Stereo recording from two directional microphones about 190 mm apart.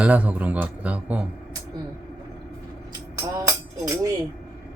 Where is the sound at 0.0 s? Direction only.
10° right (ahead or behind).